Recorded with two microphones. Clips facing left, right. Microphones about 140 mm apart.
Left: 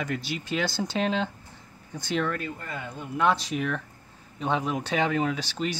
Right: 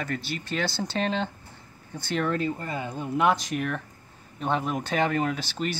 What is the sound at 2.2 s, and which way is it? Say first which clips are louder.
Speech: right 4 dB; 25° right (ahead or behind).